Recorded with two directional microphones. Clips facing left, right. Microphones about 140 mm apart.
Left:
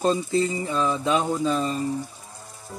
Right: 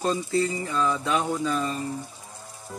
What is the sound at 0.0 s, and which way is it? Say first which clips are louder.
Speech: left 3 dB; 20° left (ahead or behind).